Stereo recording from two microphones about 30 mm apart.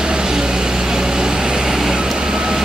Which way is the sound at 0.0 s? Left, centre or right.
Right.